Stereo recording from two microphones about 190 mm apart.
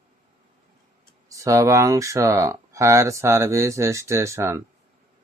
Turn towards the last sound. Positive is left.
turn(degrees=-15)  # may be behind; listen again after turning